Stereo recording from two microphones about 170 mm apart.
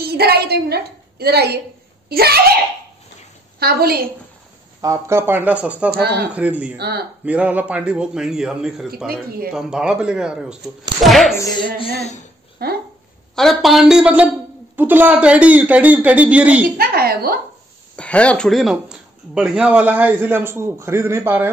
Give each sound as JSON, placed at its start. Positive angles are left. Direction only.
{"t": 0.0, "sound": "a woman's voice", "side_deg": -70}
{"t": 4.8, "sound": "speech", "side_deg": -15}
{"t": 5.9, "sound": "speech", "side_deg": -70}
{"t": 6.3, "sound": "speech", "side_deg": -10}
{"t": 6.8, "sound": "speech", "side_deg": -70}
{"t": 7.2, "sound": "a man's voice", "side_deg": -10}
{"t": 11.1, "sound": "a sound", "side_deg": 0}
{"t": 11.6, "sound": "speech", "side_deg": 35}
{"t": 12.6, "sound": "speech", "side_deg": -65}
{"t": 13.4, "sound": "a man's voice", "side_deg": 0}
{"t": 16.7, "sound": "a woman's voice", "side_deg": -60}
{"t": 17.9, "sound": "speech", "side_deg": 5}